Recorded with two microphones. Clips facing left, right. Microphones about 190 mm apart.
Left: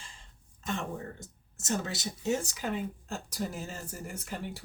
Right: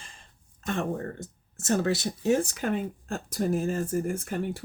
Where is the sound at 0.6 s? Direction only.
60° right (ahead or behind).